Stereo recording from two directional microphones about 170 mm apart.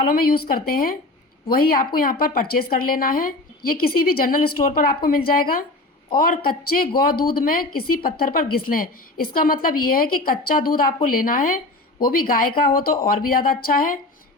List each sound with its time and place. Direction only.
0.1 s speech: 60° left (ahead or behind)